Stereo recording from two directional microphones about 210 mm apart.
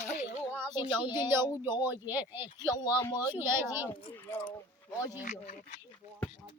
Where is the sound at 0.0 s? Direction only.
35° left (ahead or behind).